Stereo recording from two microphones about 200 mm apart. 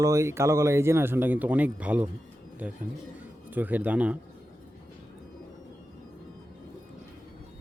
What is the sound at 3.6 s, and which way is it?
Speech, 10° right (ahead or behind).